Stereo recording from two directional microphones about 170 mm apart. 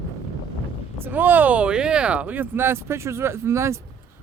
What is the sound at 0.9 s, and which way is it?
Speech, 10° right (ahead or behind).